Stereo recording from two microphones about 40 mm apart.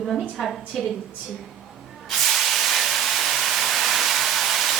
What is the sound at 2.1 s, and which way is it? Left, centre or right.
Hiss, centre.